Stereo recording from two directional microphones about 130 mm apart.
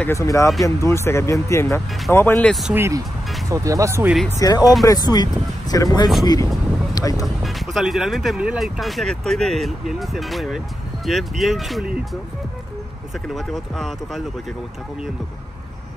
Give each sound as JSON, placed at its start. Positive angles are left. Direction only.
{"t": 0.0, "sound": "speech", "side_deg": 20}
{"t": 2.7, "sound": "speech", "side_deg": -20}
{"t": 4.4, "sound": "speech", "side_deg": 30}
{"t": 7.2, "sound": "speech", "side_deg": 0}
{"t": 13.3, "sound": "speech", "side_deg": 0}